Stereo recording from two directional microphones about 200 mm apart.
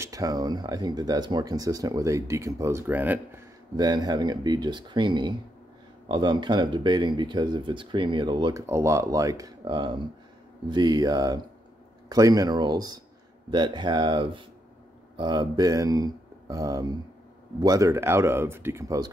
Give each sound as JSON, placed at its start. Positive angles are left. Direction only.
{"t": 0.0, "sound": "speech", "side_deg": -15}
{"t": 3.7, "sound": "speech", "side_deg": -20}